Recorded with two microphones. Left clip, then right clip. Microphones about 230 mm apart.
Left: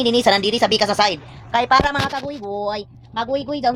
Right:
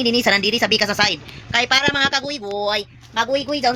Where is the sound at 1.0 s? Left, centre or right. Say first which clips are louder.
Left 1 dB; centre.